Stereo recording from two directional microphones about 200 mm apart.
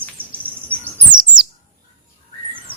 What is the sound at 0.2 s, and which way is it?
Insect, 10° right (ahead or behind).